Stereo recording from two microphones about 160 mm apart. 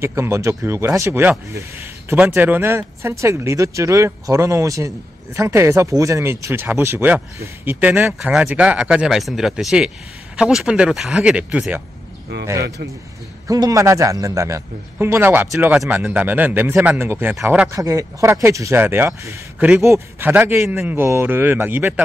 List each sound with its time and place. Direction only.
0.0 s speech: 15° right (ahead or behind)
13.5 s a man's voice: 20° right (ahead or behind)